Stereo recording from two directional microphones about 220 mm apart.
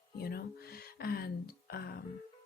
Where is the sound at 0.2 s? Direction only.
45° left (ahead or behind).